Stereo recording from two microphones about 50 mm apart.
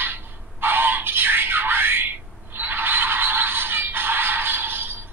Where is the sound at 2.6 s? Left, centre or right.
Right.